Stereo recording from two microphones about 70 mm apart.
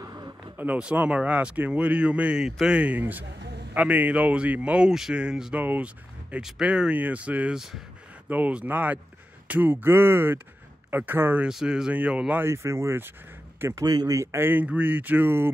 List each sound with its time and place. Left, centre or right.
0.0 s a sound: right
0.6 s speech: centre
2.8 s speech: right
5.6 s speech: right
6.6 s speech: centre
7.5 s speech: centre
8.3 s speech: right
11.4 s speech: centre
12.4 s a man's voice: right
13.8 s speech: right
14.3 s speech: right